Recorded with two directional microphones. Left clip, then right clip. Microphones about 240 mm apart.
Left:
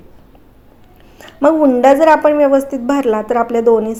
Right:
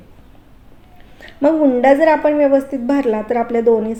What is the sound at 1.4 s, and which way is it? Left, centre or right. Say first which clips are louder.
A woman's voice: left 3 dB; centre.